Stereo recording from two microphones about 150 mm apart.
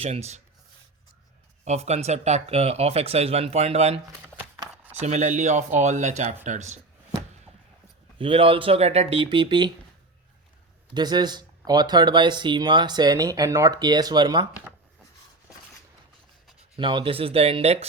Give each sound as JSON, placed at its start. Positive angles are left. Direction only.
{"t": 0.0, "sound": "speech", "side_deg": -45}
{"t": 1.6, "sound": "speech", "side_deg": -50}
{"t": 4.4, "sound": "chopping", "side_deg": -10}
{"t": 4.9, "sound": "speech", "side_deg": -50}
{"t": 8.2, "sound": "speech", "side_deg": -35}
{"t": 10.9, "sound": "speech", "side_deg": -30}
{"t": 16.7, "sound": "speech", "side_deg": -35}